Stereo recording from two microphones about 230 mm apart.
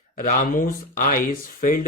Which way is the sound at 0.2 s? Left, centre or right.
Left.